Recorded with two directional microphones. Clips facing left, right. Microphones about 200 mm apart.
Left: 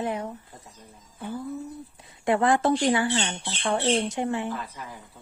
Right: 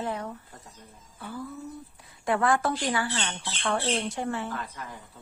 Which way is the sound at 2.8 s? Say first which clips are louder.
Left 6 dB; 20° left (ahead or behind).